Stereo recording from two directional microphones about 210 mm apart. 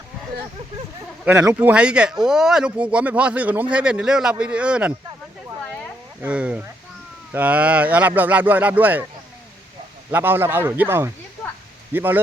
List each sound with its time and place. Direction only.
1.2 s speech: 5° right (ahead or behind)
6.2 s speech: 5° right (ahead or behind)
10.1 s speech: 10° right (ahead or behind)